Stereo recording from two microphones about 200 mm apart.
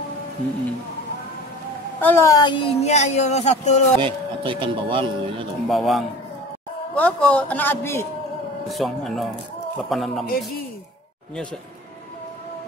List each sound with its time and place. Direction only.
2.0 s speech: 10° left (ahead or behind); by 3.8 s 35° left (ahead or behind)
4.0 s speech: 25° right (ahead or behind)
5.7 s a man's voice: centre (ahead or behind)
8.6 s speech: centre (ahead or behind)
10.2 s speech: 45° left (ahead or behind)